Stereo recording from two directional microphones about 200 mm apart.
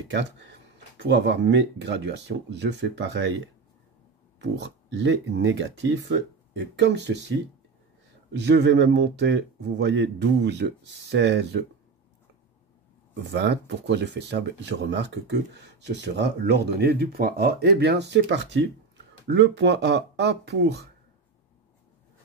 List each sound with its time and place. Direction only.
0.1 s speech: 60° right (ahead or behind)
4.4 s speech: 60° right (ahead or behind)
13.3 s speech: 60° right (ahead or behind)